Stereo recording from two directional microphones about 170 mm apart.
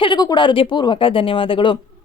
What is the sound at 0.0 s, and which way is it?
A woman's voice, 25° left (ahead or behind).